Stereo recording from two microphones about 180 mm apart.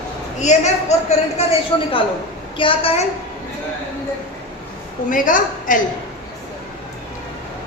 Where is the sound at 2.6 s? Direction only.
30° left (ahead or behind).